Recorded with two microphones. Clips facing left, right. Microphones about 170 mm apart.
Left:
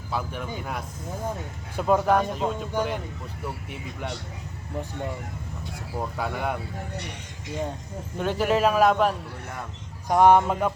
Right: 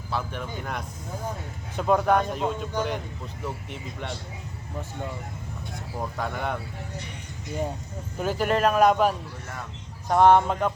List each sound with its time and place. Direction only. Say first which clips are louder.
0.1 s speech: left 1 dB; 5° left (ahead or behind)
5.7 s speech: left 1 dB; 10° left (ahead or behind)
6.9 s speech: left 2 dB; 70° left (ahead or behind)
8.2 s speech: left 1 dB; centre (ahead or behind)
10.1 s speech: even; 10° left (ahead or behind)